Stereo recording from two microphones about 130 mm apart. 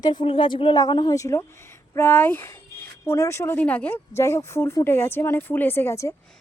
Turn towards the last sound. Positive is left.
turn(degrees=20)  # may be behind; listen again after turning